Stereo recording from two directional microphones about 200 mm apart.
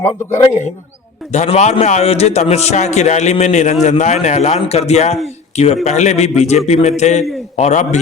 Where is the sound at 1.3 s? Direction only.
35° left (ahead or behind).